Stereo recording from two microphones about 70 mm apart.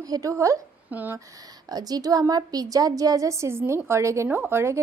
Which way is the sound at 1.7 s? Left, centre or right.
Right.